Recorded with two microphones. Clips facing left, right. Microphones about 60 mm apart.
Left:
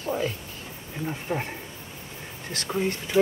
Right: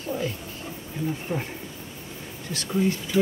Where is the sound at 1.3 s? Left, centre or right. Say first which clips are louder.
Left 4 dB; left.